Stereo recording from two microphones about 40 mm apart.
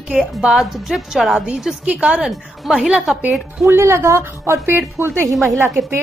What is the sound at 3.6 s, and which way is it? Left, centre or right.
Speech, right.